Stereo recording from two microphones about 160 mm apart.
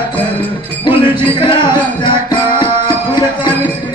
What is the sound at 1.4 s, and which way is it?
Music, 30° left (ahead or behind).